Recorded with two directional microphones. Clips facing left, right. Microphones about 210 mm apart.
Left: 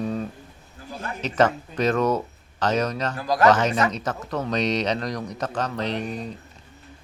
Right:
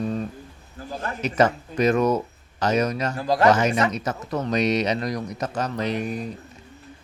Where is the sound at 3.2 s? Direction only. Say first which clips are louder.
Even; 25° right (ahead or behind).